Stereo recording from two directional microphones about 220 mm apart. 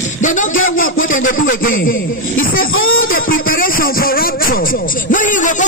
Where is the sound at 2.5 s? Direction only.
65° left (ahead or behind).